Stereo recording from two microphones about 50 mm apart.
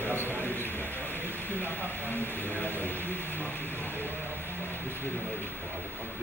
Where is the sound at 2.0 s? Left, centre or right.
Left.